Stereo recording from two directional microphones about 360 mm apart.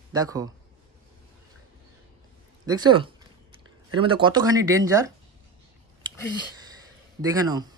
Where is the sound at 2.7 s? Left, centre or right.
Centre.